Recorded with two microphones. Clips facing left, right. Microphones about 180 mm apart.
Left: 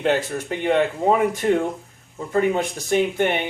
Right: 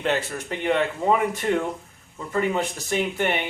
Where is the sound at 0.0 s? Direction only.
50° left (ahead or behind).